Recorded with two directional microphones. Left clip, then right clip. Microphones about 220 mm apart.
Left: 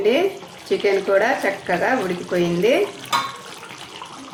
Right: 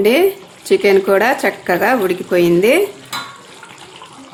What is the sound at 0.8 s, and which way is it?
Speech, 50° right (ahead or behind).